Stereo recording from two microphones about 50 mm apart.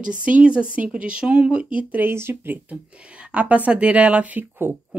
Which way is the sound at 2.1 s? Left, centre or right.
Right.